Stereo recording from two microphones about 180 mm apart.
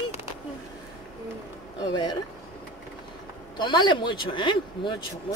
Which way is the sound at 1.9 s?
25° left (ahead or behind).